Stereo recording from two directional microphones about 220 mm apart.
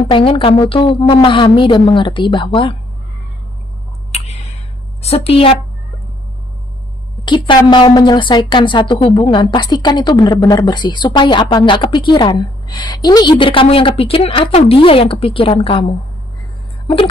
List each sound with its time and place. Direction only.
0.0 s a woman's voice: 25° left (ahead or behind)
4.1 s a sound: 30° left (ahead or behind)
5.0 s a woman's voice: 25° left (ahead or behind)
7.2 s a woman's voice: 20° left (ahead or behind)